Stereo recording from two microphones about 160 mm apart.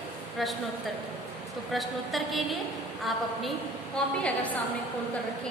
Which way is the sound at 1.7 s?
Centre (ahead or behind).